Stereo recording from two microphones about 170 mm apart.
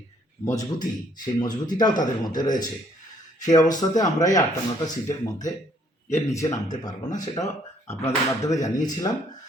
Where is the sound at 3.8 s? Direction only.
20° left (ahead or behind).